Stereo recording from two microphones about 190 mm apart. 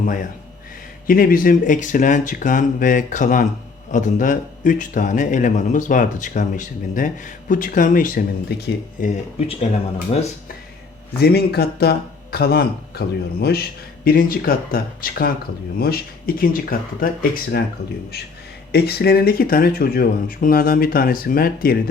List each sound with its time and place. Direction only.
1.0 s a man's voice: 50° left (ahead or behind)
11.2 s a man's voice: 55° left (ahead or behind)
18.7 s a man's voice: 55° left (ahead or behind)